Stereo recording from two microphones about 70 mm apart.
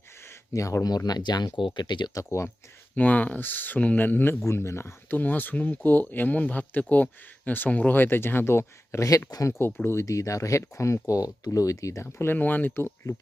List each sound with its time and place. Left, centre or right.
0.5 s speech: left
0.9 s speech: left
2.1 s speech: left
2.9 s speech: left
5.1 s speech: left